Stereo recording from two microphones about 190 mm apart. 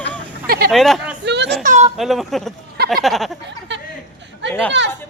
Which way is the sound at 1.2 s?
65° right (ahead or behind).